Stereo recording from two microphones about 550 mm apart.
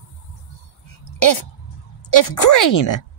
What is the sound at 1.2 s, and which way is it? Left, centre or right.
Speech, left.